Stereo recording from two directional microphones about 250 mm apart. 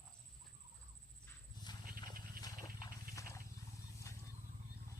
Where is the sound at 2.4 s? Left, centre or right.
Centre.